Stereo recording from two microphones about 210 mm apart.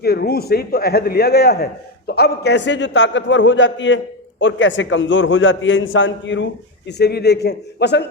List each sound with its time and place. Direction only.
0.0 s a man's voice: 50° left (ahead or behind)